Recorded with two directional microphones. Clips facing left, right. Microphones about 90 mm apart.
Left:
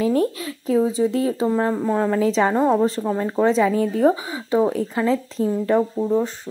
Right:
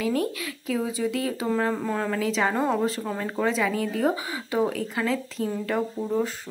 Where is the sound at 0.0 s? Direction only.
35° left (ahead or behind).